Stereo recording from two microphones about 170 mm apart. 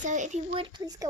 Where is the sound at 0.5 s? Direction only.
25° right (ahead or behind).